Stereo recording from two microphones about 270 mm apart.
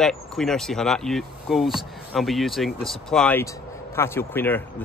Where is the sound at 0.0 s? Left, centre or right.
Centre.